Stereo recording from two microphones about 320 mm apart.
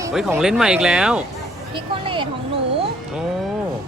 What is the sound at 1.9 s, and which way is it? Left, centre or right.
Speech, centre.